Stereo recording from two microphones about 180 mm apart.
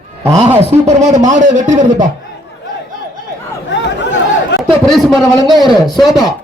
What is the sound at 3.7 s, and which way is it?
Chatter, 80° left.